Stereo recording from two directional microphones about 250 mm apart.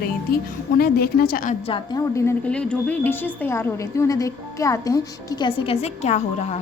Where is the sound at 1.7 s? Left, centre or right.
Centre.